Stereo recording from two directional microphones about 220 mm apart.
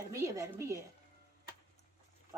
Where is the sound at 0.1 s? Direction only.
15° right (ahead or behind).